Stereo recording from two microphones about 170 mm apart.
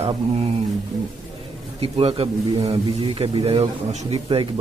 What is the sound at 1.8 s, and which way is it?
A man's voice, 35° right (ahead or behind).